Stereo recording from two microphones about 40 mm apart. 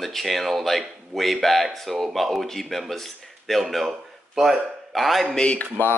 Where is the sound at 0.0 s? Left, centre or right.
Centre.